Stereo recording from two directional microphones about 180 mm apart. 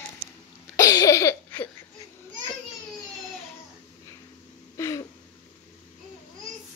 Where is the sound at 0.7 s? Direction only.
20° left (ahead or behind).